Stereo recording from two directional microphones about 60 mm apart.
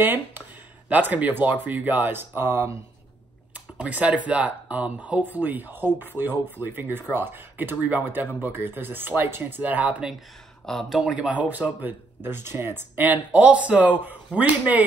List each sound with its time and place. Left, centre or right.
0.0 s speech: right
3.7 s speech: right
9.6 s speech: right
10.6 s speech: centre
11.0 s speech: centre
12.3 s speech: right
13.0 s speech: right